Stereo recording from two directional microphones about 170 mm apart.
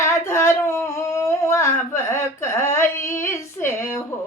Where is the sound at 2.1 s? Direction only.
15° left (ahead or behind).